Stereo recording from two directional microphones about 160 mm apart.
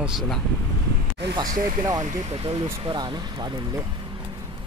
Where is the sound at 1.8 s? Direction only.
25° right (ahead or behind).